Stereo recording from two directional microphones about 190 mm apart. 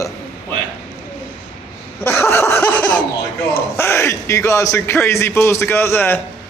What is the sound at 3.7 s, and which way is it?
A man's voice, 15° left (ahead or behind).